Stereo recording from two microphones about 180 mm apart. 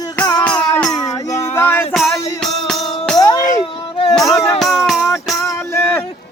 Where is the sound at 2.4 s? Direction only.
Centre (ahead or behind).